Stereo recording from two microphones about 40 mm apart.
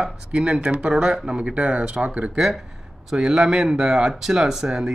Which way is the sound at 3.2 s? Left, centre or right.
Centre.